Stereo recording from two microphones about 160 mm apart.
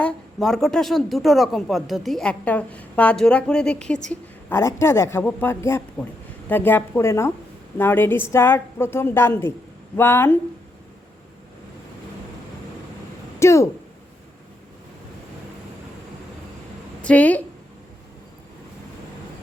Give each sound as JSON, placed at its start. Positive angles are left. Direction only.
{"t": 0.0, "sound": "a woman's voice", "side_deg": 5}
{"t": 13.4, "sound": "speech", "side_deg": 20}
{"t": 17.0, "sound": "a woman's voice", "side_deg": 10}